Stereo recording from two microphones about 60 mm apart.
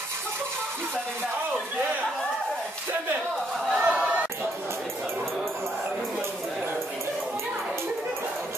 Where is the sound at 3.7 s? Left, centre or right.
Centre.